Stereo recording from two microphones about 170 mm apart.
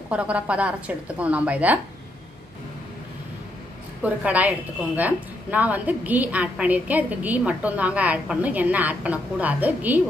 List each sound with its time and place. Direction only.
0.1 s a woman's voice: 5° right (ahead or behind)
4.0 s a woman's voice: 10° right (ahead or behind)